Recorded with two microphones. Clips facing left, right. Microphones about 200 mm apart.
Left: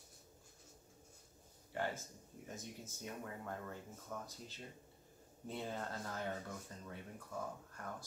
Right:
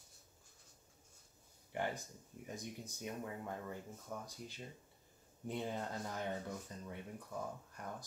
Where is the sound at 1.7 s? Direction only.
15° right (ahead or behind).